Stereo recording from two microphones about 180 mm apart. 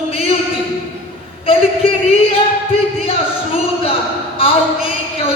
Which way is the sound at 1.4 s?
30° left (ahead or behind).